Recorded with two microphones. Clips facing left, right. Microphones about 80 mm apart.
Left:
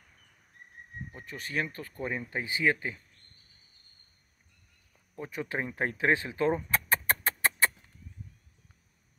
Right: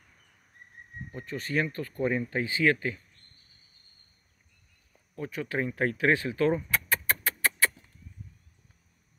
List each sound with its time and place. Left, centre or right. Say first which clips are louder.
1.1 s speech: right 4 dB; centre
2.2 s speech: right 3 dB; centre
5.1 s speech: right 2 dB; left
6.7 s music: even; left